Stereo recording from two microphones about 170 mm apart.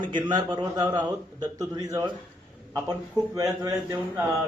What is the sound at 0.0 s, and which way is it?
A man's voice, 25° right (ahead or behind).